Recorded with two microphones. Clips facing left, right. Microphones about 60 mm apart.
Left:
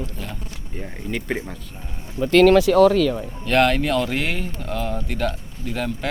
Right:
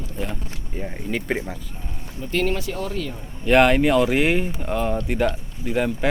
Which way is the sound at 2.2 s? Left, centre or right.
Left.